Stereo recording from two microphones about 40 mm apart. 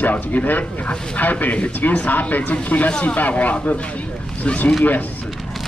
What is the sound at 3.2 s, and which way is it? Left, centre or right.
Speech, left.